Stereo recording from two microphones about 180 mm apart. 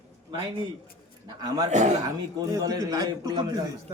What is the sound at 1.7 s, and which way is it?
Speech, 40° right (ahead or behind).